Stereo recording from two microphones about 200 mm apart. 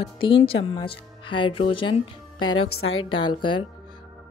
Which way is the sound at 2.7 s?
90° left.